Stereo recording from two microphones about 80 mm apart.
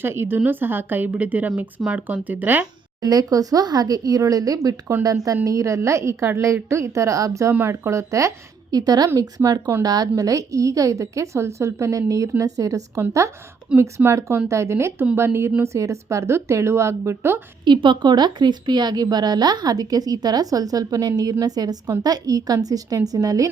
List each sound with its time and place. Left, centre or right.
0.0 s a woman's voice: right
3.0 s a woman's voice: right
7.5 s a woman's voice: right
8.7 s a woman's voice: right
17.7 s a woman's voice: right